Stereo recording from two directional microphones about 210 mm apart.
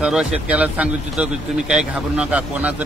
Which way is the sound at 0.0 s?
5° right (ahead or behind).